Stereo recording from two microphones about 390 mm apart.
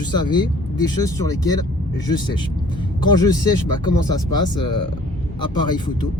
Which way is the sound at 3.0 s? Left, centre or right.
Centre.